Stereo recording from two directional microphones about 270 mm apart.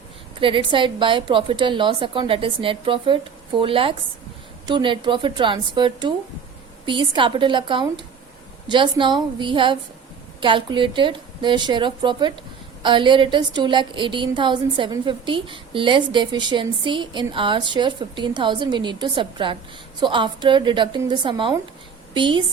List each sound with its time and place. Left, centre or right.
0.3 s a woman's voice: centre